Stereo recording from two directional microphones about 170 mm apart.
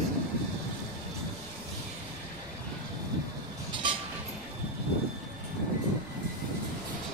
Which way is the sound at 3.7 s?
30° right (ahead or behind).